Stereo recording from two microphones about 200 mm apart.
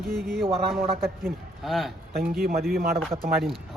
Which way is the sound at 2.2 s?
50° right (ahead or behind).